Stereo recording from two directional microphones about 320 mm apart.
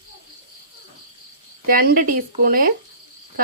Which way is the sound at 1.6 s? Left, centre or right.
Right.